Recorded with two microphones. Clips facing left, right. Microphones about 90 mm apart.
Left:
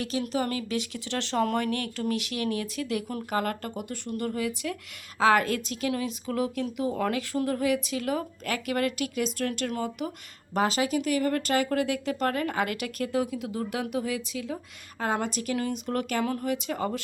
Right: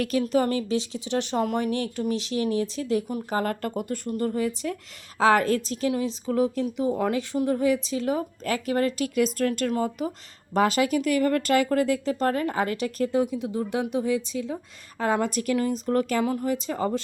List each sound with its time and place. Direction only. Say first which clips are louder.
0.0 s speech: right 6 dB; 45° right (ahead or behind)
4.1 s speech: right 3 dB; 35° right (ahead or behind)
9.1 s speech: right 6 dB; 45° right (ahead or behind)
15.2 s speech: right 5 dB; 45° right (ahead or behind)
15.5 s speech: right 6 dB; 30° right (ahead or behind)
16.2 s speech: right 3 dB; 20° right (ahead or behind)
16.5 s speech: right 3 dB; 30° right (ahead or behind)